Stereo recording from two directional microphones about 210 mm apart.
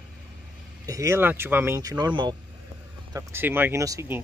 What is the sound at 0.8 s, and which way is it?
Speech, 15° right (ahead or behind).